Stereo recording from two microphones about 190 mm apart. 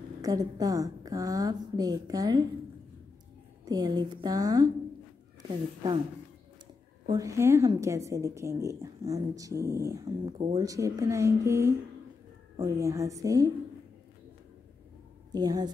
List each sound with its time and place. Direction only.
0.2 s a woman's voice: 20° right (ahead or behind)
3.6 s a woman's voice: 20° right (ahead or behind)
7.1 s a woman's voice: 15° right (ahead or behind)
15.3 s a woman's voice: 20° right (ahead or behind)